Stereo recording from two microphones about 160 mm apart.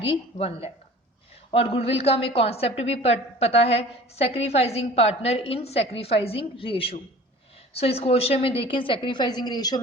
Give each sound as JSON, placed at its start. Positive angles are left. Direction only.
{"t": 0.0, "sound": "a woman's voice", "side_deg": 35}